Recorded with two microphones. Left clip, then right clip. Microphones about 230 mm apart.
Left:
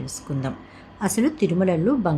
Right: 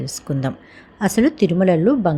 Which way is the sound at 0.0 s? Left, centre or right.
Right.